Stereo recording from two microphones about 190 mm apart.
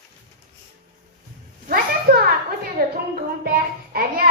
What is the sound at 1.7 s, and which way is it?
Child singing, 50° right (ahead or behind).